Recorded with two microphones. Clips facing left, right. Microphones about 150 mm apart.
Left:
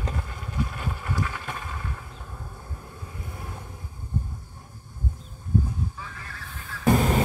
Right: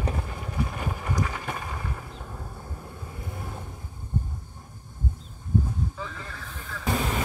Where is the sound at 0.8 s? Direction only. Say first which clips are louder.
Right 1 dB; 10° right (ahead or behind).